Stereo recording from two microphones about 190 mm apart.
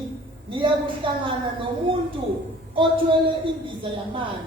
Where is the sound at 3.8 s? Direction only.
25° right (ahead or behind).